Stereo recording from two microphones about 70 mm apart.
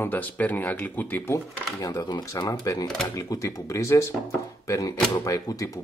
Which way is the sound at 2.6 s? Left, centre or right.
Left.